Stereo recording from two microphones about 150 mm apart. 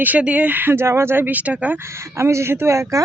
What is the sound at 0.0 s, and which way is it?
Speech, 10° right (ahead or behind).